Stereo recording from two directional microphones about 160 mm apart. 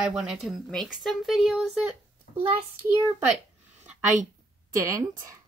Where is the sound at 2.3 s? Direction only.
70° left (ahead or behind).